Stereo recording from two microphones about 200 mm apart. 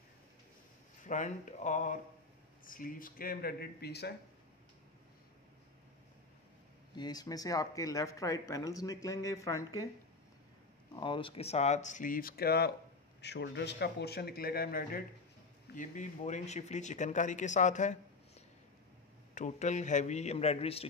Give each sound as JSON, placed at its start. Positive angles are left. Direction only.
{"t": 1.0, "sound": "speech", "side_deg": 40}
{"t": 7.0, "sound": "speech", "side_deg": 20}
{"t": 11.0, "sound": "speech", "side_deg": 25}